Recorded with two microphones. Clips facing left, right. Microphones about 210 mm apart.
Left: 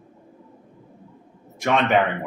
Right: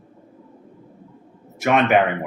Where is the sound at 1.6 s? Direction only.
5° right (ahead or behind).